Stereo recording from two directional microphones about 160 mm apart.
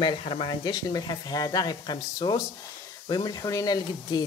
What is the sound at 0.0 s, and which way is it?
Speech, 35° left (ahead or behind).